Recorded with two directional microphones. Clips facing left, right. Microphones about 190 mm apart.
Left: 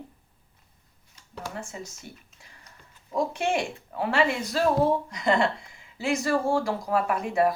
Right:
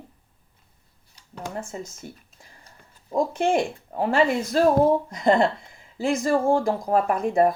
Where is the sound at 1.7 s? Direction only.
40° right (ahead or behind).